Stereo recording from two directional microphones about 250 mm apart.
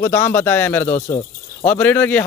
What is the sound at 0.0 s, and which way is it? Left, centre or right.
Speech, centre.